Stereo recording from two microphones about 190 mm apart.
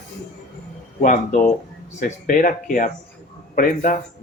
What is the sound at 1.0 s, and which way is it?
Speech, 45° left (ahead or behind).